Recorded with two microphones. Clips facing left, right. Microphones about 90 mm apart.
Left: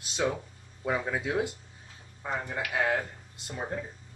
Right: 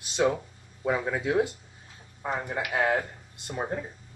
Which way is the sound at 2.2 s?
20° right (ahead or behind).